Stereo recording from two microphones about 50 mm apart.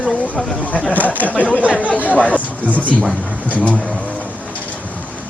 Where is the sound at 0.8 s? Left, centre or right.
Left.